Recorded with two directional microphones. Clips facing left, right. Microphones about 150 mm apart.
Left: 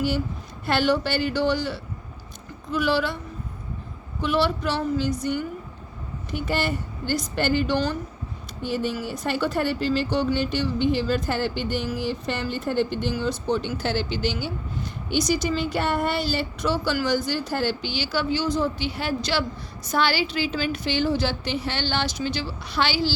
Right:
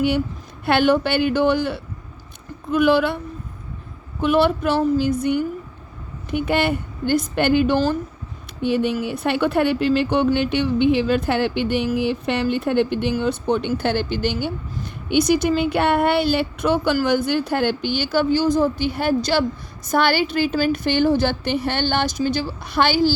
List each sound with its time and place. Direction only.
0.6 s speech: 60° right (ahead or behind)
4.2 s a woman's voice: 55° right (ahead or behind)
6.3 s speech: 60° right (ahead or behind)
8.6 s a woman's voice: 65° right (ahead or behind); by 23.1 s 50° right (ahead or behind)